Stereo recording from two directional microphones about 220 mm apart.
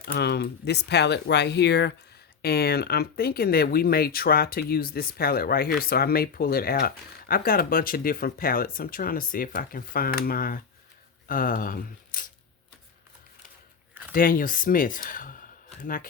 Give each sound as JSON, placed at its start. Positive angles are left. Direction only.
{"t": 0.0, "sound": "speech", "side_deg": 45}
{"t": 14.1, "sound": "speech", "side_deg": 40}